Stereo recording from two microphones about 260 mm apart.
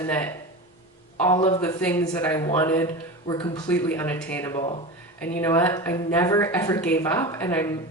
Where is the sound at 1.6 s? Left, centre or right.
Centre.